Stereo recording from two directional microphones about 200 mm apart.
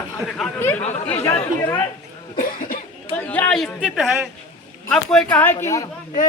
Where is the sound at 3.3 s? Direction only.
5° left (ahead or behind).